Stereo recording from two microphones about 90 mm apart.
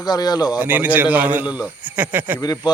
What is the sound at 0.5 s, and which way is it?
A man's voice, 20° right (ahead or behind).